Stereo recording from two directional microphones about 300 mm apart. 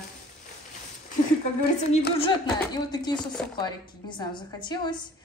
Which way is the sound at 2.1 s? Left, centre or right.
Centre.